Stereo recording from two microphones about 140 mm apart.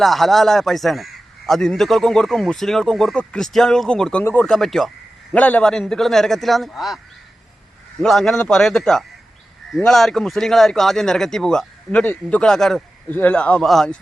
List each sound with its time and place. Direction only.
0.0 s speech: centre (ahead or behind)
4.2 s speech: 15° left (ahead or behind)
4.4 s speech: 5° left (ahead or behind)
8.0 s speech: 5° left (ahead or behind)